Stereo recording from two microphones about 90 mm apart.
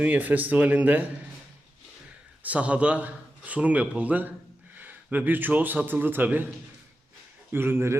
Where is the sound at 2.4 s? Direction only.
15° right (ahead or behind).